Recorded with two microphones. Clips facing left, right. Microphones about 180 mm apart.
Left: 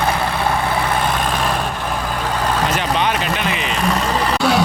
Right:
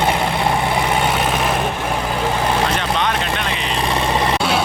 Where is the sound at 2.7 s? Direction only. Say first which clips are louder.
Left 1 dB; 5° left (ahead or behind).